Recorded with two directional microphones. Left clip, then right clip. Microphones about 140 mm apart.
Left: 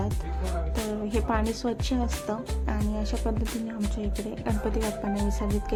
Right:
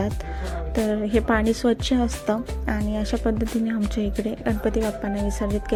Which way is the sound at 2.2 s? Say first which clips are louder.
Right 7 dB; 30° right (ahead or behind).